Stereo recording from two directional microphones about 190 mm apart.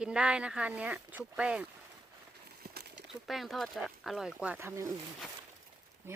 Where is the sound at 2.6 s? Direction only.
55° right (ahead or behind).